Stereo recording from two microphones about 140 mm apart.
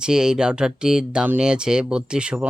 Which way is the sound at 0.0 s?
5° right (ahead or behind).